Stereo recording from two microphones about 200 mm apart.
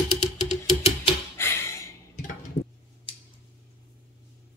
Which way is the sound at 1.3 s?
10° left (ahead or behind).